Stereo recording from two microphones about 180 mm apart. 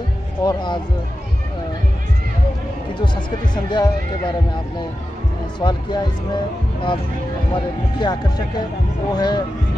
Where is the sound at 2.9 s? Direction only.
25° left (ahead or behind).